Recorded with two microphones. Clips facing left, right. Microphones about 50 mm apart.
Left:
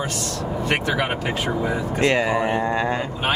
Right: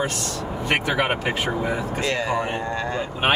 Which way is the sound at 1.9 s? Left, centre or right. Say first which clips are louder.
Left 4 dB; left.